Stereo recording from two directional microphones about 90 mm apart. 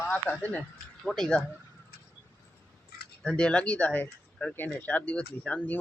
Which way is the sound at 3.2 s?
10° left (ahead or behind).